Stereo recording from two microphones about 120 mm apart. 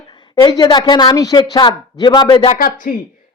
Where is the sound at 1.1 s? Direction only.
30° left (ahead or behind).